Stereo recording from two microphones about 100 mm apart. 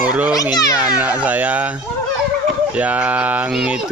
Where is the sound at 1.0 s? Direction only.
15° right (ahead or behind).